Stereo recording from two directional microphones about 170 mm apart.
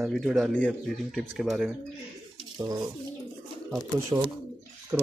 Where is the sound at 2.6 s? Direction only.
25° right (ahead or behind).